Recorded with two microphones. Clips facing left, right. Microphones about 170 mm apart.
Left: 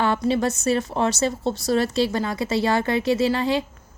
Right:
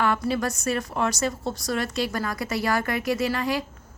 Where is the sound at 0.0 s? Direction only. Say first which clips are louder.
Left 3 dB; 30° left (ahead or behind).